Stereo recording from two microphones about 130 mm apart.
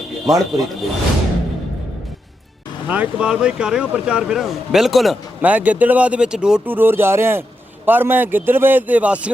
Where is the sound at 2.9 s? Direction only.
10° right (ahead or behind).